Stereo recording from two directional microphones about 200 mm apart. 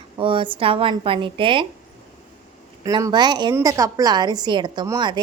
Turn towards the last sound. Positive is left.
turn(degrees=-20)  # may be behind; listen again after turning